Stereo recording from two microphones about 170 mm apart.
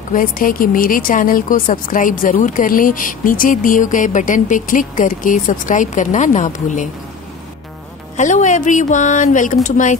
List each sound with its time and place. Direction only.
0.1 s a woman's voice: 55° left (ahead or behind)
8.2 s a woman's voice: 45° left (ahead or behind)